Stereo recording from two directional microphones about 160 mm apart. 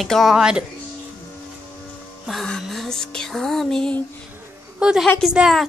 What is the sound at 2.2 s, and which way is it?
Music, centre (ahead or behind).